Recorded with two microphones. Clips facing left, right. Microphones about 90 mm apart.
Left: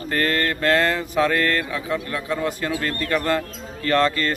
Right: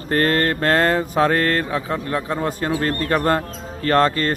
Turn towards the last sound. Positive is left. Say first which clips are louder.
# right 3 dB
turn(degrees=-35)  # may be behind; listen again after turning